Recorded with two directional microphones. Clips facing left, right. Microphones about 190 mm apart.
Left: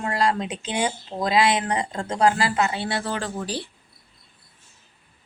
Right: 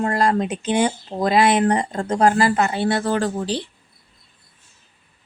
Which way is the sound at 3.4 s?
25° right (ahead or behind).